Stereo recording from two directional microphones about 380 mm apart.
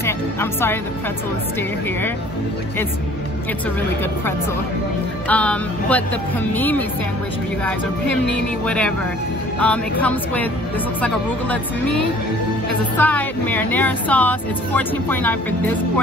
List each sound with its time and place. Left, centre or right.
0.0 s speech: centre
5.3 s speech: centre
8.6 s speech: centre
12.9 s speech: centre